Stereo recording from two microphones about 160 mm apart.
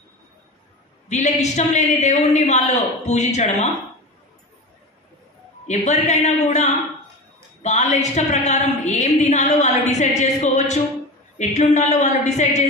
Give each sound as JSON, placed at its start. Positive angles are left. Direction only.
{"t": 1.0, "sound": "a woman's voice", "side_deg": 45}
{"t": 5.7, "sound": "a woman's voice", "side_deg": 45}